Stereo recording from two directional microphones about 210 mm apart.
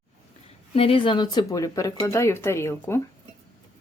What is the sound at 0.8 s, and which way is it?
Speech, 25° left (ahead or behind).